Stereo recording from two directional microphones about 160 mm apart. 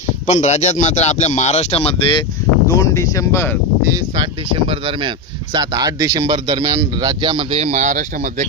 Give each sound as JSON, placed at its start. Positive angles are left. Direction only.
{"t": 0.3, "sound": "speech", "side_deg": 45}
{"t": 2.6, "sound": "speech", "side_deg": 20}
{"t": 4.2, "sound": "speech", "side_deg": -35}